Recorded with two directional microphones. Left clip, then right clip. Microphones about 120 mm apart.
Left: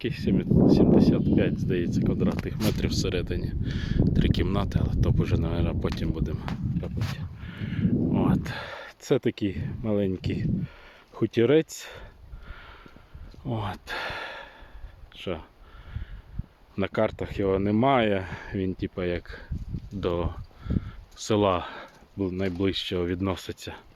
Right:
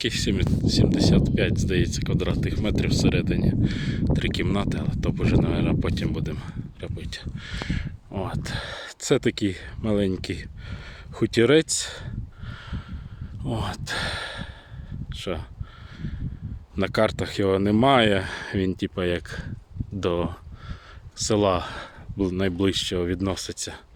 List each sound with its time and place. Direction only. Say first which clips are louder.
0.0 s speech: right 3 dB; 10° right (ahead or behind)
7.2 s speech: right 7 dB; 15° right (ahead or behind)
9.0 s speech: right 3 dB; 30° right (ahead or behind)
11.1 s speech: right 3 dB; 40° right (ahead or behind)
13.4 s speech: right 2 dB; 35° right (ahead or behind)
13.7 s speech: right 5 dB; 15° right (ahead or behind)
15.2 s speech: right 2 dB; 30° right (ahead or behind)
16.7 s speech: right 4 dB; 35° right (ahead or behind)
21.3 s speech: right 2 dB; 30° right (ahead or behind)
22.2 s speech: right 4 dB; 60° right (ahead or behind)
23.0 s speech: right 2 dB; 25° right (ahead or behind)